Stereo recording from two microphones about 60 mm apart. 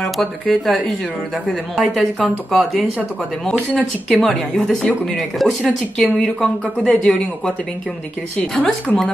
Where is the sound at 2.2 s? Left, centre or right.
Centre.